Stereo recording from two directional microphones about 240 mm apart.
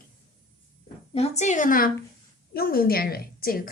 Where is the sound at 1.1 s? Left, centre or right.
Left.